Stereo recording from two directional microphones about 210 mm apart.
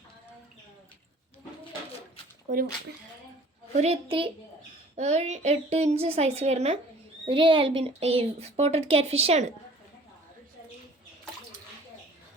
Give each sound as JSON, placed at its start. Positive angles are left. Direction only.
{"t": 2.5, "sound": "speech", "side_deg": -35}
{"t": 3.8, "sound": "a woman's voice", "side_deg": -30}